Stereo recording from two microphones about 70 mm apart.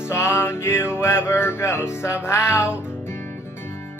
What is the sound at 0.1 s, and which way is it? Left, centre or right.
Music, left.